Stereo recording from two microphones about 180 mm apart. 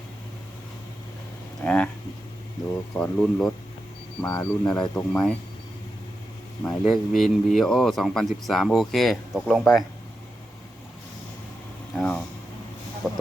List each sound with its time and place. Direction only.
1.6 s speech: 5° left (ahead or behind)
2.9 s speech: 5° left (ahead or behind)
4.3 s speech: 20° left (ahead or behind)
4.8 s speech: 5° left (ahead or behind)
6.6 s speech: 5° left (ahead or behind)
11.9 s speech: 5° left (ahead or behind)
13.0 s a sound: centre (ahead or behind)